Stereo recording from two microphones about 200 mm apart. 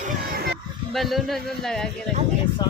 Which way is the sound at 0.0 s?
50° right (ahead or behind).